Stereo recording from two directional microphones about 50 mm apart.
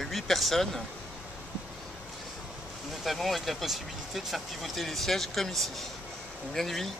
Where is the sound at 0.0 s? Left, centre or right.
Centre.